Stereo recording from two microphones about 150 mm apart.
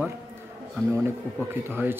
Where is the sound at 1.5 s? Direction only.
15° right (ahead or behind).